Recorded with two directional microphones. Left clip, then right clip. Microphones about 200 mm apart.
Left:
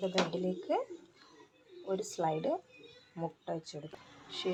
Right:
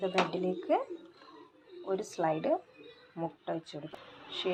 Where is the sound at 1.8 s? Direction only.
10° right (ahead or behind).